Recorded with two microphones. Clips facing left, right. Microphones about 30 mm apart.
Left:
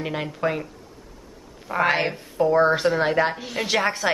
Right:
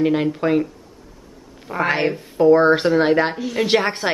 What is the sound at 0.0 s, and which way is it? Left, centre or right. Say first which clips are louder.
Speech: right 7 dB; centre.